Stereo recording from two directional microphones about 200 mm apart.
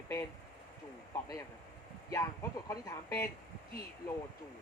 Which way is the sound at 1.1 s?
15° left (ahead or behind).